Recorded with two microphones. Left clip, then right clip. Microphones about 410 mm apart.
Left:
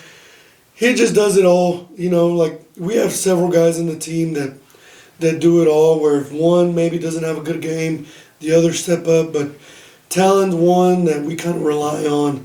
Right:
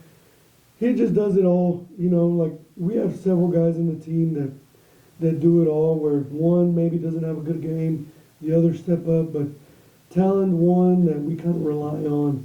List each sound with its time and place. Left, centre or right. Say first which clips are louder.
0.8 s speech: left 7 dB; centre
6.3 s speech: left 7 dB; centre
6.6 s speech: left 6 dB; centre
10.8 s speech: left 6 dB; centre